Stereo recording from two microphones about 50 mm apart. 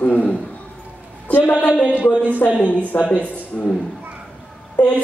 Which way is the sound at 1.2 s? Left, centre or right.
Left.